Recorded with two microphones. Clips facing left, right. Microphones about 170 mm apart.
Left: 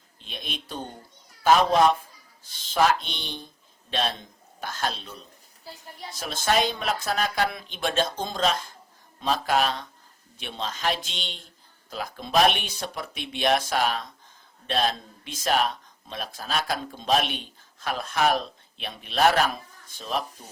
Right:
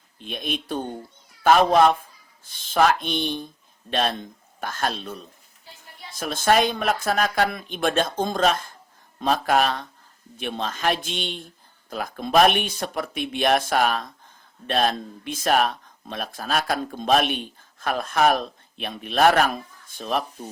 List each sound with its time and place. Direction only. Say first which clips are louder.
0.2 s speech: right 8 dB; 50° right (ahead or behind)
5.6 s a sound: left 5 dB; 40° left (ahead or behind)
6.1 s speech: right 5 dB; 50° right (ahead or behind)